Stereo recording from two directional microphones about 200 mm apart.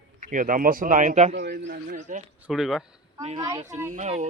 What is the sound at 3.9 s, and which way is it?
Speech, 35° right (ahead or behind).